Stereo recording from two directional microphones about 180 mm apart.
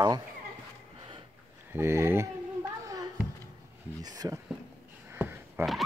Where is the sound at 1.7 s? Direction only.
15° right (ahead or behind).